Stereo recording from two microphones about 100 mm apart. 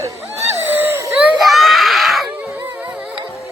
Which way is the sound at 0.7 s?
20° right (ahead or behind).